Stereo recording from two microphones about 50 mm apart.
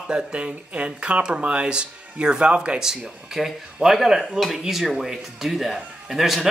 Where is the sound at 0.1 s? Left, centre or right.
Right.